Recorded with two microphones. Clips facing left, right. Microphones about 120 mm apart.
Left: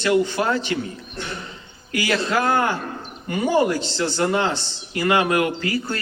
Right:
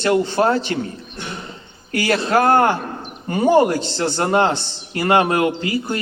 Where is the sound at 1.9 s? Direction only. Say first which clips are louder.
Right 4 dB; 40° right (ahead or behind); by 5.9 s 20° right (ahead or behind).